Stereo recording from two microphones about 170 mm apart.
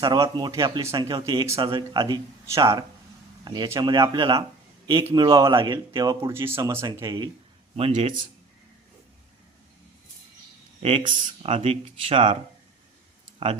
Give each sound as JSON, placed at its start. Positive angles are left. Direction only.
{"t": 0.0, "sound": "speech", "side_deg": -25}
{"t": 11.0, "sound": "speech", "side_deg": -50}